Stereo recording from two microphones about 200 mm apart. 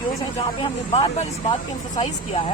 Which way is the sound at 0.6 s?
30° left (ahead or behind).